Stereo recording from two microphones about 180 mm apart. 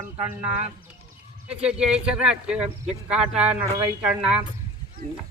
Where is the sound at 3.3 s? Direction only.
35° right (ahead or behind).